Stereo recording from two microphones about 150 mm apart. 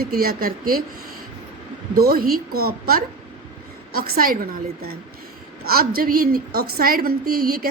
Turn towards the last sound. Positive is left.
turn(degrees=-80)